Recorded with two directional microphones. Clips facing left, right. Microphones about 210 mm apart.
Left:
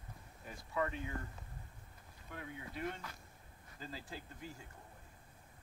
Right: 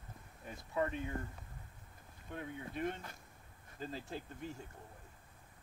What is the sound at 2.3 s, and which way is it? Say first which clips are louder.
Speech: right 4 dB; 25° right (ahead or behind).